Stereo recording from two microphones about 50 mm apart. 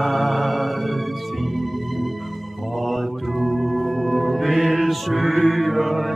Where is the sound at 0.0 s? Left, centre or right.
Centre.